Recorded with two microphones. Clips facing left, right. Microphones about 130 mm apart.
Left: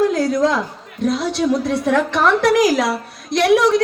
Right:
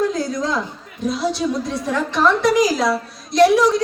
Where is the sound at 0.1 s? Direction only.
65° left (ahead or behind).